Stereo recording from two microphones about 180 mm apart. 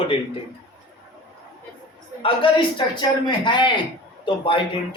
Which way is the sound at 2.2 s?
30° left (ahead or behind).